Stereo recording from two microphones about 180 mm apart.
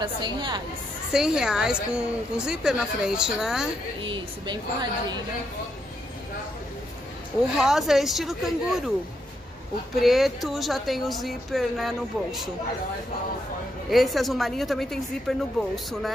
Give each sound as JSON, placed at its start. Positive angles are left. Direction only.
{"t": 0.0, "sound": "a woman's voice", "side_deg": -25}
{"t": 1.1, "sound": "a woman's voice", "side_deg": -5}
{"t": 4.0, "sound": "a woman's voice", "side_deg": -25}
{"t": 7.5, "sound": "a woman's voice", "side_deg": 0}
{"t": 9.9, "sound": "a woman's voice", "side_deg": 0}
{"t": 13.8, "sound": "a woman's voice", "side_deg": 0}